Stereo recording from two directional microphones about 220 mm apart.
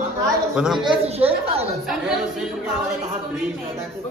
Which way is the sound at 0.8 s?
25° right (ahead or behind).